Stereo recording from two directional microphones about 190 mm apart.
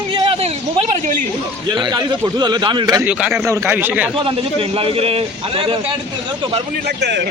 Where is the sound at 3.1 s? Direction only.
5° right (ahead or behind).